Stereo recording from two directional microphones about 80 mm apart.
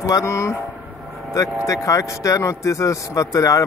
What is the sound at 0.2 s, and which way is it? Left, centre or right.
Speech, left.